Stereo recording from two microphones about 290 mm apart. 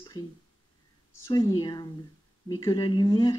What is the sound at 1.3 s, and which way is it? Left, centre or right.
Speech, centre.